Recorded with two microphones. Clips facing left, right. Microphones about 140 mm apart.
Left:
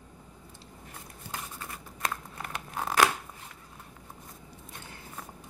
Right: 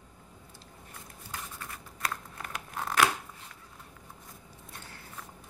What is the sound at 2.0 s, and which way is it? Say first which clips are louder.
Crumpling: left 2 dB; 25° left (ahead or behind).